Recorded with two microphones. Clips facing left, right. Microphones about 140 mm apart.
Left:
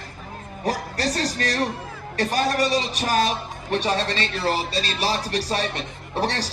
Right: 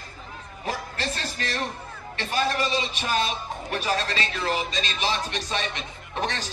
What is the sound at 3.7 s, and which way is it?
A man's voice, 30° left (ahead or behind).